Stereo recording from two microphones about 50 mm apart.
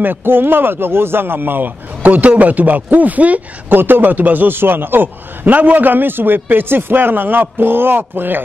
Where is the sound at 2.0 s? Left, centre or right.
Right.